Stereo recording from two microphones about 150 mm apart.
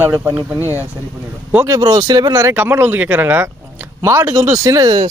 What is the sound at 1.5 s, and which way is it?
Speech, 20° right (ahead or behind).